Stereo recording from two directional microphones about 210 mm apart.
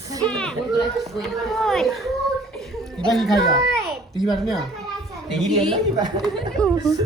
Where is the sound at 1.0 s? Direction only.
Centre (ahead or behind).